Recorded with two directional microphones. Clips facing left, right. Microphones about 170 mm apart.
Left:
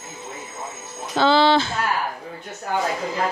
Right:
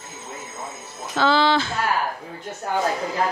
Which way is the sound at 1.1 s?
30° left (ahead or behind).